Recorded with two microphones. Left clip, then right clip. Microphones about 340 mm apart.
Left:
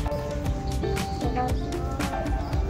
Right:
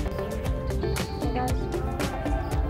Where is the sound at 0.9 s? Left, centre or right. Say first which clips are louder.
Left 3 dB; centre.